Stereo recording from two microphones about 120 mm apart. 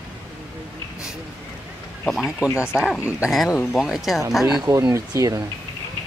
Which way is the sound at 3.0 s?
15° right (ahead or behind).